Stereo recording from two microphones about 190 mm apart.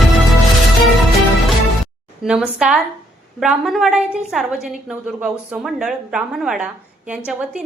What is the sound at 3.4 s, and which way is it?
A woman's voice, centre (ahead or behind).